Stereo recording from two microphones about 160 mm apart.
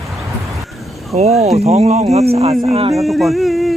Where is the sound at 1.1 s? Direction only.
50° right (ahead or behind).